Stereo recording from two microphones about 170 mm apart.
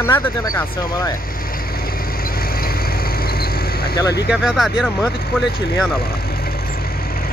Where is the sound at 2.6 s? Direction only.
60° left (ahead or behind).